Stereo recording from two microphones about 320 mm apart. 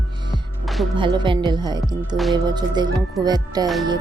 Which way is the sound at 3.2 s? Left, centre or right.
Centre.